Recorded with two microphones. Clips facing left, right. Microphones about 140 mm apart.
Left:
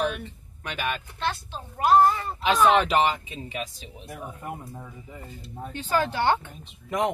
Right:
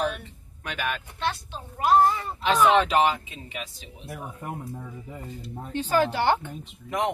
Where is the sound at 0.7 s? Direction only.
Centre (ahead or behind).